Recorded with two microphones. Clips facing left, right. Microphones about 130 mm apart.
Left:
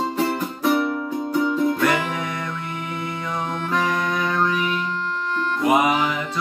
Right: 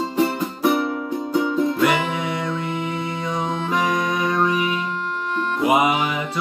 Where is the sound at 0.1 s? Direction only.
15° right (ahead or behind).